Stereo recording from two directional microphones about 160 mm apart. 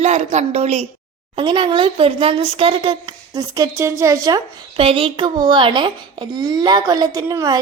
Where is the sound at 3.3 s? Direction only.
20° right (ahead or behind).